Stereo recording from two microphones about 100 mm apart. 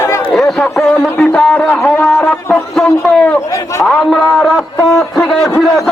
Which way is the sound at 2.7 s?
10° left (ahead or behind).